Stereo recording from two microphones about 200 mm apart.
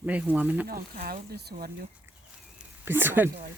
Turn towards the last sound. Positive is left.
turn(degrees=-10)  # may be behind; listen again after turning